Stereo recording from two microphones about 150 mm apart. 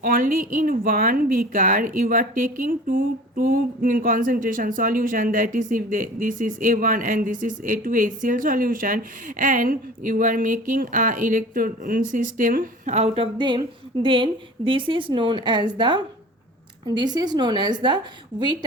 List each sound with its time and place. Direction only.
0.0 s a woman's voice: 65° right (ahead or behind); by 13.2 s 50° right (ahead or behind)
14.0 s a woman's voice: 35° right (ahead or behind)